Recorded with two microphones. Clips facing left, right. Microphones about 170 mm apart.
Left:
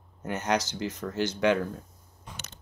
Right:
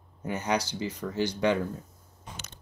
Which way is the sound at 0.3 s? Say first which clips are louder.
Left 1 dB; 10° right (ahead or behind).